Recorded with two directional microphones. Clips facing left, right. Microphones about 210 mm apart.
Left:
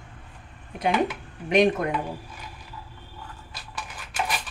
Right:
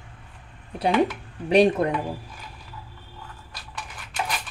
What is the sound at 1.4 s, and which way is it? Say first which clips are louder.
Speech: right 2 dB; 35° right (ahead or behind).